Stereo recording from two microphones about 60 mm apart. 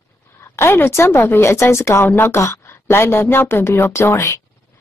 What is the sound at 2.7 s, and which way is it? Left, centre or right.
A woman's voice, left.